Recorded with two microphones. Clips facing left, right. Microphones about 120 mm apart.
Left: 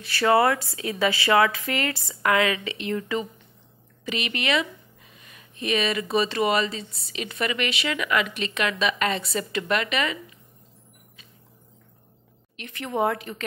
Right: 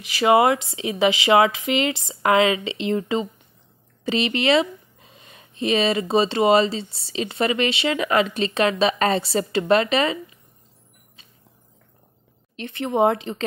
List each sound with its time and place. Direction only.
0.0 s speech: 15° right (ahead or behind); by 10.1 s 30° right (ahead or behind)
12.5 s speech: 30° right (ahead or behind)